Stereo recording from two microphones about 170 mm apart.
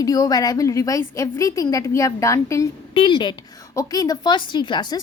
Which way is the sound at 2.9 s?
30° left (ahead or behind).